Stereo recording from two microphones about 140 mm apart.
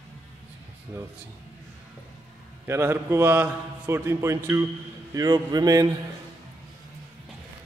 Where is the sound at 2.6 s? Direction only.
15° right (ahead or behind).